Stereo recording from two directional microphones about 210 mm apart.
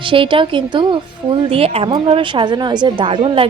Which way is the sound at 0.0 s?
25° right (ahead or behind).